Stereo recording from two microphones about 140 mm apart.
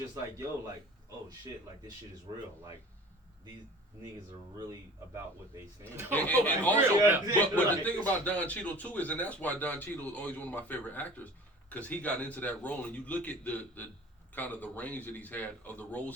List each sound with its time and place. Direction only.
4.5 s a man's voice: 30° right (ahead or behind)
6.1 s a man's voice: 10° left (ahead or behind)
6.7 s a man's voice: 20° right (ahead or behind)
7.3 s a man's voice: 10° left (ahead or behind)